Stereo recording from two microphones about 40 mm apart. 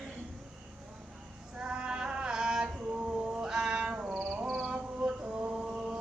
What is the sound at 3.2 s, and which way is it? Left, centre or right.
Cat, centre.